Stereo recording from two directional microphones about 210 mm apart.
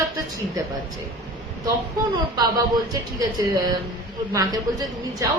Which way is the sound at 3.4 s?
15° right (ahead or behind).